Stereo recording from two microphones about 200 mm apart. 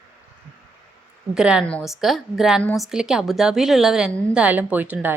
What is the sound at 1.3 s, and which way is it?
A woman's voice, 5° right (ahead or behind).